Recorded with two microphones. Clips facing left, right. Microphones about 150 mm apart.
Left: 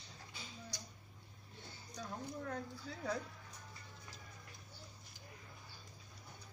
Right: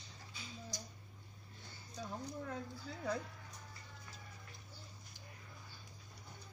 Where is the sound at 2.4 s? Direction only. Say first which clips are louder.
Left 1 dB; centre (ahead or behind).